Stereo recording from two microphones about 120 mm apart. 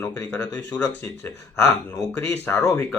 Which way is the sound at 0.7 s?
30° left (ahead or behind).